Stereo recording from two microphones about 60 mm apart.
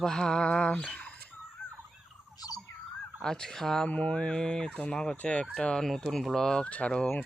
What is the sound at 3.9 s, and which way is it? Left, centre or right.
Speech, centre.